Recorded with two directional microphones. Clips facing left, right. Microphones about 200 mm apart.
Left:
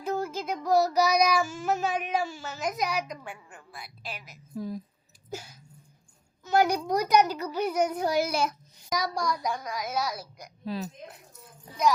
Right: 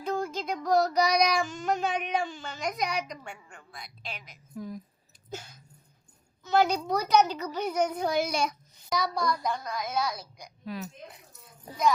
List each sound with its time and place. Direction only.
0.0 s child singing: 5° left (ahead or behind)
4.5 s a woman's voice: 30° left (ahead or behind)
5.3 s a child's voice: 10° left (ahead or behind)
10.7 s a woman's voice: 30° left (ahead or behind)